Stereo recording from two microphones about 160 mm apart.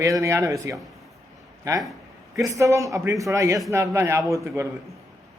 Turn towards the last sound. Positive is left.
turn(degrees=-15)  # may be behind; listen again after turning